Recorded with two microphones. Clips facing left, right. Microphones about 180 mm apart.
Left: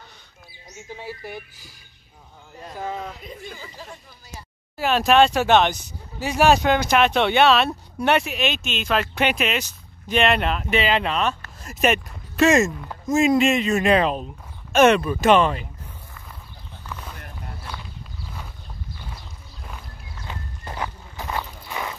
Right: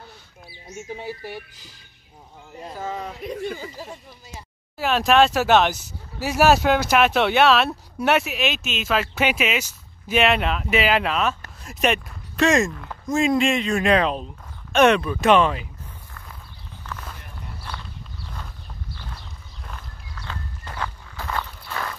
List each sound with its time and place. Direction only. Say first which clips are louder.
3.3 s speech: right 9 dB; 70° right (ahead or behind)
4.7 s speech: left 1 dB; centre (ahead or behind)
16.8 s a sound: even; 10° left (ahead or behind)
20.2 s walk: left 1 dB; 20° left (ahead or behind)